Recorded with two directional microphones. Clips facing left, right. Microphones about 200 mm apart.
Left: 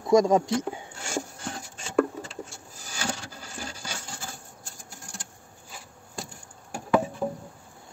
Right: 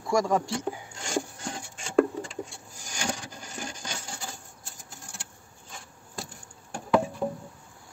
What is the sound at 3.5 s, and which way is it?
Coin, 10° left (ahead or behind).